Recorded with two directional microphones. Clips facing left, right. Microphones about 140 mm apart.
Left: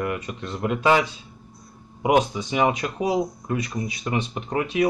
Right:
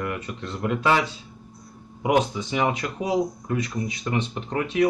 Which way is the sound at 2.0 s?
15° left (ahead or behind).